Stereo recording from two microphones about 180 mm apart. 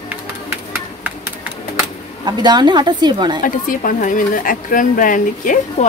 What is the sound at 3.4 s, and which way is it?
A woman's voice, 50° left (ahead or behind).